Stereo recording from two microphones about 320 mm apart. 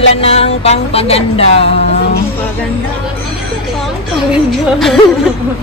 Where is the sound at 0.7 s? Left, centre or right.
Centre.